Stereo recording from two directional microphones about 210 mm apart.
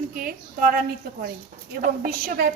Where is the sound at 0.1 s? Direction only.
40° right (ahead or behind).